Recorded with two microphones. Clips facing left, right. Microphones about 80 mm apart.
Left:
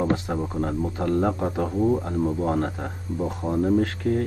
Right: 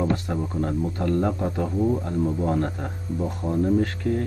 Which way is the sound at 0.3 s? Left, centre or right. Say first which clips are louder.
Even; left.